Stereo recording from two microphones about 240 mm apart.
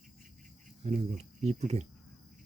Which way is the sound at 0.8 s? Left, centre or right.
Right.